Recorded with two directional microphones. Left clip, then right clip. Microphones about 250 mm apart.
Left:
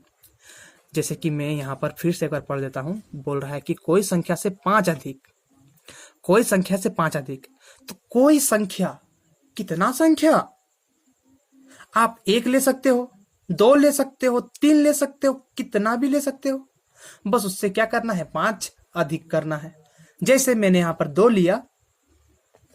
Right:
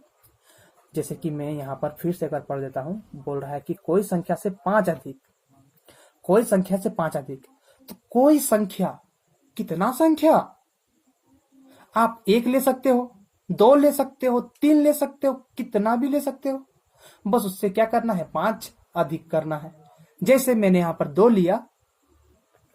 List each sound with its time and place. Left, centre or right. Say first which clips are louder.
0.9 s speech: left 3 dB; left
11.9 s speech: left 1 dB; left